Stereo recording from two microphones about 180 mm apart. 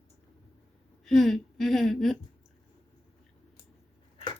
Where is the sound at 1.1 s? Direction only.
Centre (ahead or behind).